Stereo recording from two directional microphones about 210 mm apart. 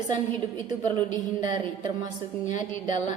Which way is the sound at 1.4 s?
35° left (ahead or behind).